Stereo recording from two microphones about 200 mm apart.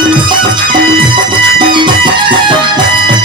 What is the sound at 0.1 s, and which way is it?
Music, 25° right (ahead or behind).